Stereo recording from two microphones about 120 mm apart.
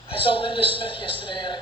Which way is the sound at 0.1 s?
50° left (ahead or behind).